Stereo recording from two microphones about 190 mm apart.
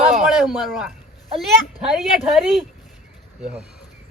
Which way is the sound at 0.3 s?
Centre (ahead or behind).